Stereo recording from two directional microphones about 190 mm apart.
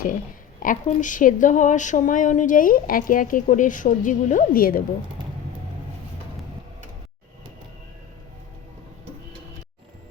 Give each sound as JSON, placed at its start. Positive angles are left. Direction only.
{"t": 0.6, "sound": "speech", "side_deg": 45}